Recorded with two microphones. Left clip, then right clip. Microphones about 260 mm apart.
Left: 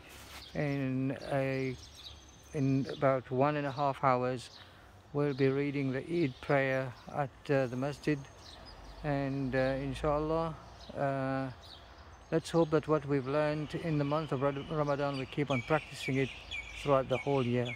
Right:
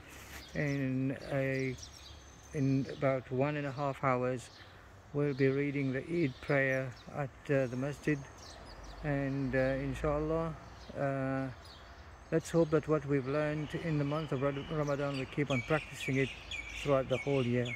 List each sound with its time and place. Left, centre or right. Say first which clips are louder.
0.5 s speech: left 1 dB; centre
9.0 s speech: left 1 dB; centre
16.5 s bird: left 1 dB; right
16.8 s speech: left 2 dB; centre